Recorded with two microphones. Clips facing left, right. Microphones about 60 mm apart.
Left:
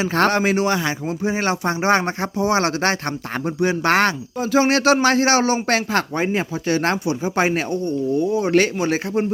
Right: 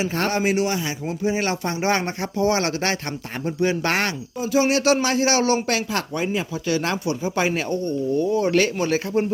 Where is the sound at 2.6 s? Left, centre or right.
Left.